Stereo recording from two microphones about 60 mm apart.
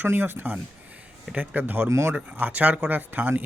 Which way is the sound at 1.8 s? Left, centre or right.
Right.